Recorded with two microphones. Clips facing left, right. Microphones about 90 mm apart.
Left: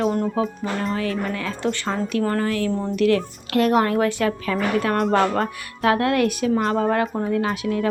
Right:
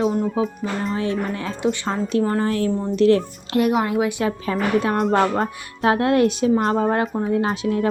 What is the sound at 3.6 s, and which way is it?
A woman's voice, 10° right (ahead or behind).